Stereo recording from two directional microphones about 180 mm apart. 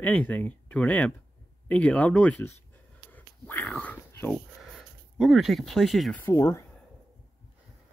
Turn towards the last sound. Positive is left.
turn(degrees=15)  # may be behind; listen again after turning